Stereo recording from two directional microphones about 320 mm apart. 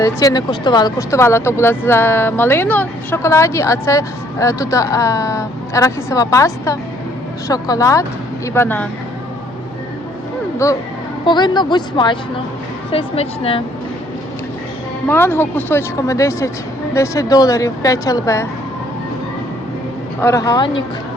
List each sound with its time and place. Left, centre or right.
0.0 s speech: centre
10.6 s speech: centre
15.0 s speech: centre
20.2 s speech: centre